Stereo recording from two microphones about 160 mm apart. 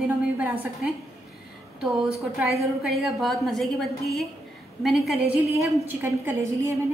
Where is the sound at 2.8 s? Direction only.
Centre (ahead or behind).